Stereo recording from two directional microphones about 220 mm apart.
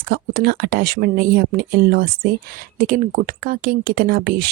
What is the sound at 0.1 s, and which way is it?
Speech, 45° right (ahead or behind).